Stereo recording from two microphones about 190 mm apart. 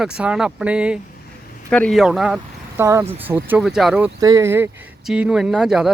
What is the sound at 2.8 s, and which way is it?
Speech, 15° right (ahead or behind).